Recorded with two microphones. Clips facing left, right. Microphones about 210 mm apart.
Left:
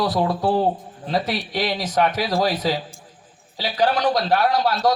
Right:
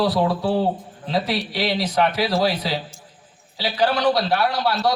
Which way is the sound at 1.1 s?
50° left (ahead or behind).